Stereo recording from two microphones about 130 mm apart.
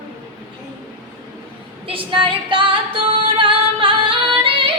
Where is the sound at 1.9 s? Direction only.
40° right (ahead or behind).